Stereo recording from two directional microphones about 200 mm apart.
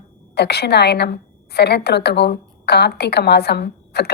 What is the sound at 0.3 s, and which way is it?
A woman's voice, 55° left (ahead or behind).